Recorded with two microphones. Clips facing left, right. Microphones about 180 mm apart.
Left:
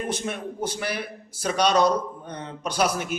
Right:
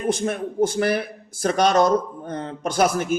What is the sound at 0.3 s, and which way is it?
A man's voice, 50° right (ahead or behind).